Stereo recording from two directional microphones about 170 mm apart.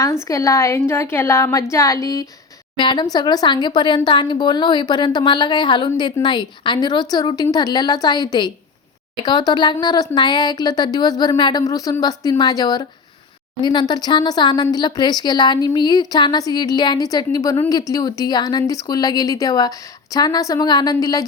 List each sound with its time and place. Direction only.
0.3 s a woman's voice: 20° left (ahead or behind)